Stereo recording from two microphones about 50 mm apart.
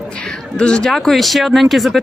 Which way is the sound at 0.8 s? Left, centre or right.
Centre.